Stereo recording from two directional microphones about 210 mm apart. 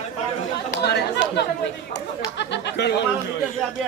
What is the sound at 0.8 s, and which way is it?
Speech, 50° left (ahead or behind).